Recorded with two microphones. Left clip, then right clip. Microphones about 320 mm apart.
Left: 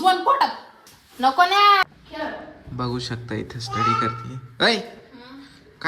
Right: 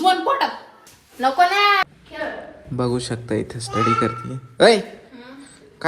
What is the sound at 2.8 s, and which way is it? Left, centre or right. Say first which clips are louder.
Speech: right 5 dB; centre.